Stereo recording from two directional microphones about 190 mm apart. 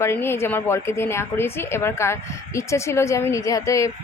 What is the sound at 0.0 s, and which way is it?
A woman's voice, 10° left (ahead or behind).